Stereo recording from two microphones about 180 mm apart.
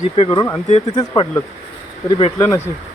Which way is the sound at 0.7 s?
35° left (ahead or behind).